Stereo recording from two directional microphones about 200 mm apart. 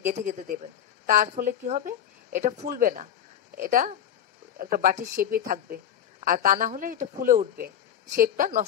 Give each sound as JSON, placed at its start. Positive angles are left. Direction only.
{"t": 0.1, "sound": "speech", "side_deg": -35}